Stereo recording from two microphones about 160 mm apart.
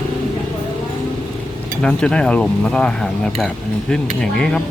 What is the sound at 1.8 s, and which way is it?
Speech, 5° left (ahead or behind).